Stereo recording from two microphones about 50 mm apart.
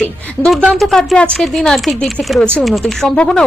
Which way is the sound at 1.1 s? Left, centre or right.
Centre.